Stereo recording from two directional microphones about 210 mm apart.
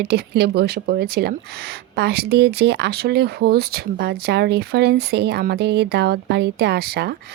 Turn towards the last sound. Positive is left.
turn(degrees=-50)  # may be behind; listen again after turning